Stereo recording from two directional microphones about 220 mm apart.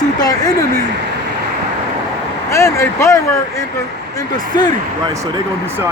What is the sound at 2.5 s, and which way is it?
Speech, 15° left (ahead or behind).